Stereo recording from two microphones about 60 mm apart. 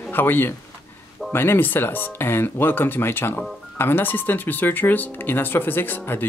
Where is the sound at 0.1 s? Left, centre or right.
Left.